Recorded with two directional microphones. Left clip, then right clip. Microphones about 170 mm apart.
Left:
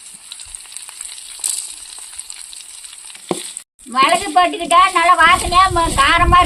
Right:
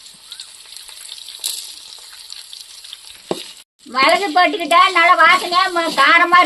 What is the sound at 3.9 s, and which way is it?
A woman's voice, 30° right (ahead or behind).